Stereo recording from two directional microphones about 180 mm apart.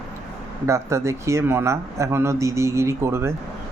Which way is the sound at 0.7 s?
15° right (ahead or behind).